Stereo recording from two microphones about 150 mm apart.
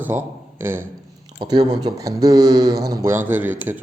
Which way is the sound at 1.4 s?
25° right (ahead or behind).